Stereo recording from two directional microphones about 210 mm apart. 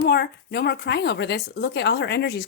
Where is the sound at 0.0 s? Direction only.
50° left (ahead or behind).